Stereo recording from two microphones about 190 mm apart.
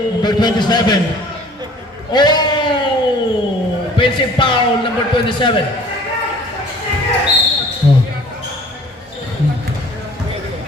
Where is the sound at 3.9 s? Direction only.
25° left (ahead or behind).